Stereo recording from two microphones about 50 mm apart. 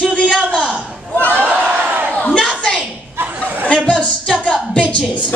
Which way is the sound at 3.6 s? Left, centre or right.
Left.